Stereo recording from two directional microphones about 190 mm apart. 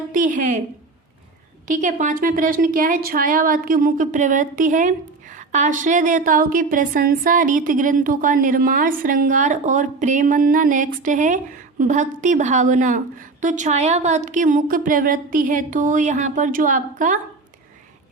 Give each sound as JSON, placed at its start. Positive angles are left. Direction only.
{"t": 0.1, "sound": "a woman's voice", "side_deg": -45}
{"t": 1.6, "sound": "a woman's voice", "side_deg": -40}